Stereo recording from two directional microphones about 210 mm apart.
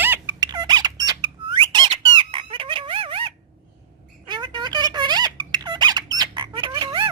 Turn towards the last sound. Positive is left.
turn(degrees=-20)  # may be behind; listen again after turning